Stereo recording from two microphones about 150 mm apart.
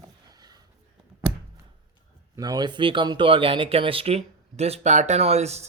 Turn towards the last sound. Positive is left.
turn(degrees=-45)  # may be behind; listen again after turning